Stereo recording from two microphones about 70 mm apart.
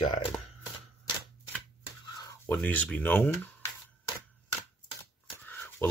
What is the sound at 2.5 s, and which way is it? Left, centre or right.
Speech, left.